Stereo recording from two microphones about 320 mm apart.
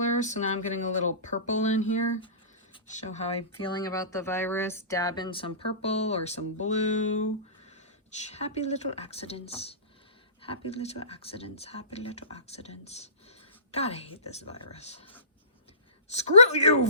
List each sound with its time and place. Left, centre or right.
0.0 s speech: left
2.7 s speech: left
16.1 s speech: centre